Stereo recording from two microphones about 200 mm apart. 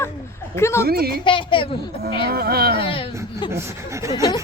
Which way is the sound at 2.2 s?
50° right (ahead or behind).